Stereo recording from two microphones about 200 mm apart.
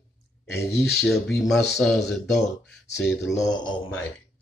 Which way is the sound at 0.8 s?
Centre (ahead or behind).